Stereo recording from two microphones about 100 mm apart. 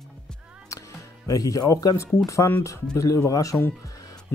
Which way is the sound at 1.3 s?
35° left (ahead or behind).